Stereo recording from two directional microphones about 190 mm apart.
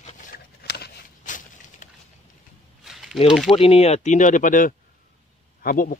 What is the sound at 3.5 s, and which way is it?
Speech, 30° left (ahead or behind).